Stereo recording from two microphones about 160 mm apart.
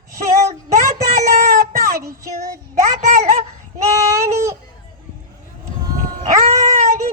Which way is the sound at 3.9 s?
15° right (ahead or behind).